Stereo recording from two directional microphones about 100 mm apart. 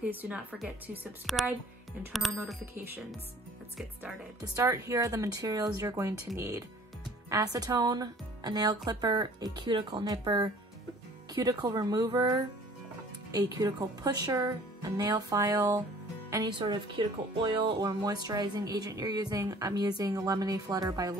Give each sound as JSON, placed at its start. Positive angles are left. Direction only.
{"t": 0.1, "sound": "speech", "side_deg": -15}
{"t": 1.3, "sound": "speech", "side_deg": 0}
{"t": 2.6, "sound": "speech", "side_deg": -20}
{"t": 4.6, "sound": "speech", "side_deg": -35}
{"t": 16.5, "sound": "speech", "side_deg": -55}
{"t": 17.7, "sound": "speech", "side_deg": -40}